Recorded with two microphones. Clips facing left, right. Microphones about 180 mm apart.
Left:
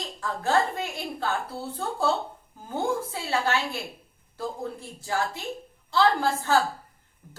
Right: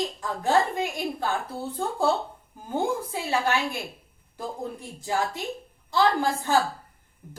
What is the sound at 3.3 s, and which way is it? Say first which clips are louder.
A woman's voice: right 1 dB; 15° right (ahead or behind).